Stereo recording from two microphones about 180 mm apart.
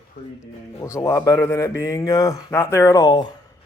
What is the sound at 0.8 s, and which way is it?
Speech, 15° left (ahead or behind).